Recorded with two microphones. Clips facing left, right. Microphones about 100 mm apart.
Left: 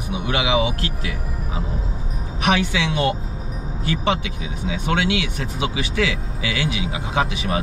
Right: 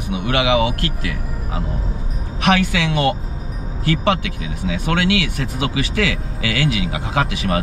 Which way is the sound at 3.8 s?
70° right (ahead or behind).